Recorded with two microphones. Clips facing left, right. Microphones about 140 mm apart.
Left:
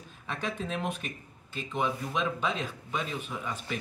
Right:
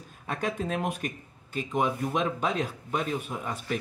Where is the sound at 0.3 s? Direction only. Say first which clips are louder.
Right 4 dB; 45° right (ahead or behind).